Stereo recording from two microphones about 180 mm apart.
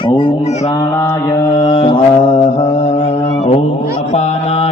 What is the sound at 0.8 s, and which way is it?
Mantra, 20° left (ahead or behind).